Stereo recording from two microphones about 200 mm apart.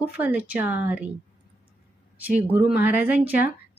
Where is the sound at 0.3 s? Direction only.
10° right (ahead or behind).